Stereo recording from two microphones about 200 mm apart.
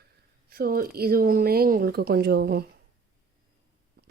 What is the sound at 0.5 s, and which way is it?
Speech, 50° right (ahead or behind).